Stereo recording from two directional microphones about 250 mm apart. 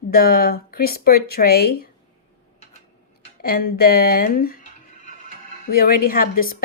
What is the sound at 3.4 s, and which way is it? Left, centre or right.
Speech, left.